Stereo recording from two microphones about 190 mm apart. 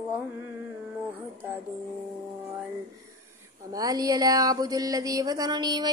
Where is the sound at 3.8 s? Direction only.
20° right (ahead or behind).